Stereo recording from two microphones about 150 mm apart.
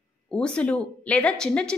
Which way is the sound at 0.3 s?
5° left (ahead or behind).